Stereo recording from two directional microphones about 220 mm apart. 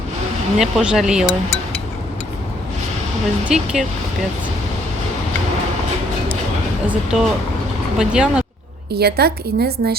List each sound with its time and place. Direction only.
0.6 s speech: 5° right (ahead or behind)
3.5 s speech: 5° right (ahead or behind)
6.8 s speech: 5° right (ahead or behind)
9.0 s a woman's voice: 45° right (ahead or behind)